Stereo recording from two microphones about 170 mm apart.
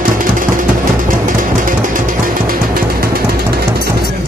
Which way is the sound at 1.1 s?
50° right (ahead or behind).